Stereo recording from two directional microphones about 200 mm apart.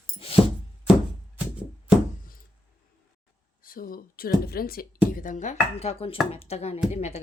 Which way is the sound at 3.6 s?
45° left (ahead or behind).